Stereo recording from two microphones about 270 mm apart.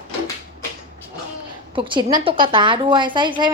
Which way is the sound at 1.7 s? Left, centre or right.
Centre.